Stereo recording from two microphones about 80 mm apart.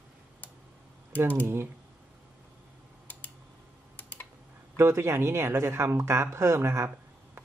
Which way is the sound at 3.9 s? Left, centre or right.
Left.